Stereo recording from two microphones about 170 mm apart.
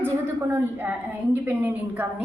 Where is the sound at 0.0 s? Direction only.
15° right (ahead or behind).